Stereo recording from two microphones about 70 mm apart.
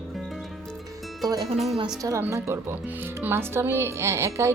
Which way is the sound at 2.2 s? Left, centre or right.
Right.